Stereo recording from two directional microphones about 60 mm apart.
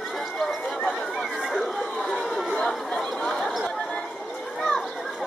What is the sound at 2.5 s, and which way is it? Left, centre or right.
Chatter, centre.